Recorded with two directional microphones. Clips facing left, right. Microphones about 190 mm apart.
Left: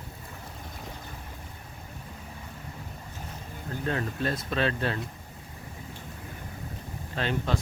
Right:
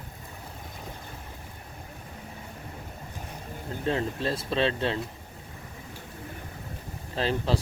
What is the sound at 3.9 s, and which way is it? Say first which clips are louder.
Speech: right 2 dB; 25° right (ahead or behind).